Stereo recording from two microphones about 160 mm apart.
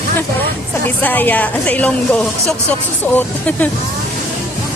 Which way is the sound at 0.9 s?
10° left (ahead or behind).